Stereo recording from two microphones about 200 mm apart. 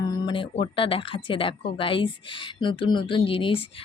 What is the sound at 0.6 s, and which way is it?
Speech, 25° left (ahead or behind).